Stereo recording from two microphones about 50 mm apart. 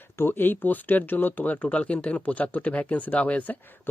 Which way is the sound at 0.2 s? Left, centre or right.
Left.